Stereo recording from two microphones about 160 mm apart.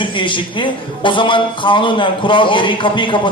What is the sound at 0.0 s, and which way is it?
A man's voice, 30° left (ahead or behind).